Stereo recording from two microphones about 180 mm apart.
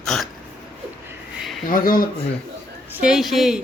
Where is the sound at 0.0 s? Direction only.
5° left (ahead or behind).